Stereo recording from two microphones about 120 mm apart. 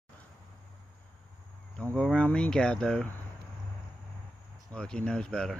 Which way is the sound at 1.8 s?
10° left (ahead or behind).